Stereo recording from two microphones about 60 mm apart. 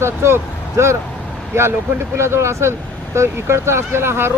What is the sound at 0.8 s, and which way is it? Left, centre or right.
Speech, right.